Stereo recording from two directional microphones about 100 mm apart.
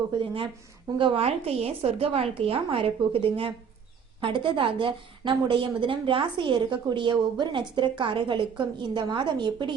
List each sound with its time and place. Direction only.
0.2 s a woman's voice: 60° right (ahead or behind)
4.2 s a woman's voice: 55° right (ahead or behind)